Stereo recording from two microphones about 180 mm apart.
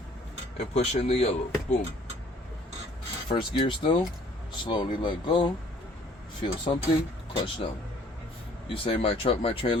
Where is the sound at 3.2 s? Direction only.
30° left (ahead or behind).